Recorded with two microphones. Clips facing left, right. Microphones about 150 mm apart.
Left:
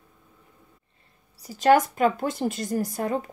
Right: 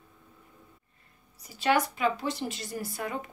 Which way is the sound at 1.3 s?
40° left (ahead or behind).